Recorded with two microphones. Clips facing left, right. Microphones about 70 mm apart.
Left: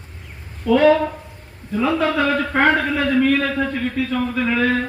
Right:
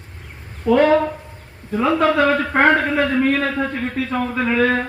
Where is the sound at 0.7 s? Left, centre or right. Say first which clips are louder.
Even; right.